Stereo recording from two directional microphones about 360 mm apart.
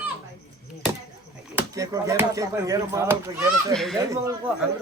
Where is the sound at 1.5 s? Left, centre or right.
Centre.